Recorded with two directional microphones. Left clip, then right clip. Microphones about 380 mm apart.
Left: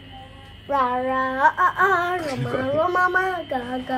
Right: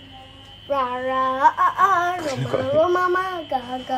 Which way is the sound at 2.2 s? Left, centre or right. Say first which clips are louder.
Right 2 dB; centre.